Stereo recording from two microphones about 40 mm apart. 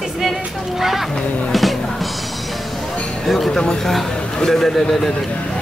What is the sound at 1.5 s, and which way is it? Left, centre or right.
Music, centre.